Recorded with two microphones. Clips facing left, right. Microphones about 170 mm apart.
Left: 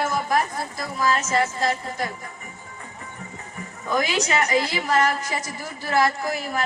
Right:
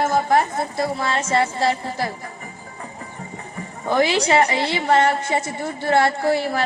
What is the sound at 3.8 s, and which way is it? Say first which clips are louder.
A woman's voice: right 5 dB; 30° right (ahead or behind).